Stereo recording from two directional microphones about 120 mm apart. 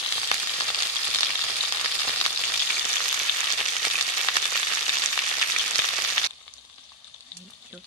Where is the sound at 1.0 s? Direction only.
10° left (ahead or behind).